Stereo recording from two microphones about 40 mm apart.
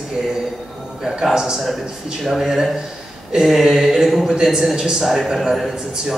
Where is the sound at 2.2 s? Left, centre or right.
Centre.